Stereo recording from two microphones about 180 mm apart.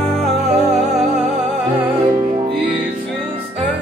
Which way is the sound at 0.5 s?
40° right (ahead or behind).